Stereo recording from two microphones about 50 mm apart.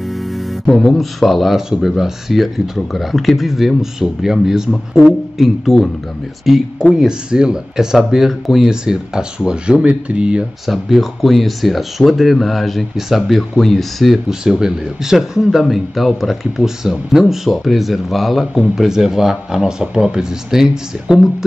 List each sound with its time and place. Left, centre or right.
0.7 s speech: centre
8.6 s speech: centre
10.7 s speech: centre
14.4 s speech: centre